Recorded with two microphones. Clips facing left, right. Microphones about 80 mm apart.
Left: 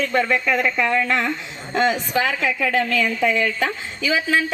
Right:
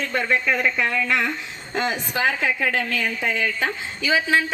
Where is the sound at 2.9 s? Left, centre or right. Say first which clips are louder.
Left 5 dB; left.